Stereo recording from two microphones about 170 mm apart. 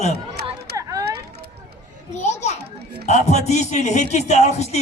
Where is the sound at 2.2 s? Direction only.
40° left (ahead or behind).